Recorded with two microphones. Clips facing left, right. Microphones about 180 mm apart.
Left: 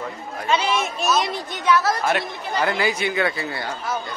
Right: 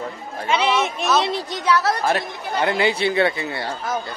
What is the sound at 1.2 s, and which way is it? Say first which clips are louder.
Speech: right 1 dB; 30° right (ahead or behind).